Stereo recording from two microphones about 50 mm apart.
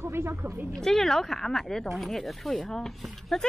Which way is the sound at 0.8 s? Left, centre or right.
Centre.